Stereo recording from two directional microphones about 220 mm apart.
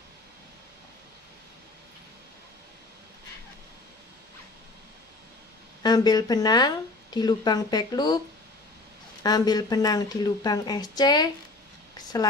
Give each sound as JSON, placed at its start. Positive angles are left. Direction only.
{"t": 5.8, "sound": "speech", "side_deg": 20}
{"t": 9.2, "sound": "speech", "side_deg": 20}